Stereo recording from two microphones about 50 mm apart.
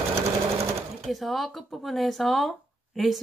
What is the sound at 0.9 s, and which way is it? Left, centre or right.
Speech, centre.